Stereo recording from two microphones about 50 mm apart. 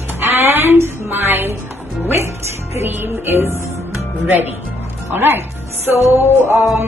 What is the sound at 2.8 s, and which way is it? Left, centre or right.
Music, right.